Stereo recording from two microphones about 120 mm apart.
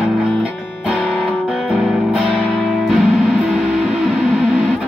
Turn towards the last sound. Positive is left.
turn(degrees=0)  # may be behind; listen again after turning